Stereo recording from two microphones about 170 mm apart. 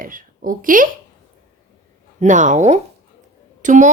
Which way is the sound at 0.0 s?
55° right (ahead or behind).